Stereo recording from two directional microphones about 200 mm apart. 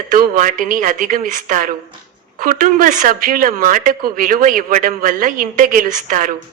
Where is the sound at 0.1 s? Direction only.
40° right (ahead or behind).